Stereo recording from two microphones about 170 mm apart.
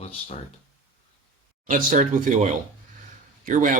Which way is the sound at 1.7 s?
50° right (ahead or behind).